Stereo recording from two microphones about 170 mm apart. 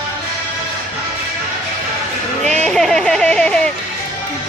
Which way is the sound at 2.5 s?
5° left (ahead or behind).